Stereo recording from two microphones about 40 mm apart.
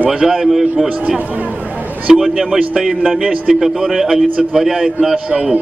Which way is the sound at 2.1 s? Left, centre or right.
Centre.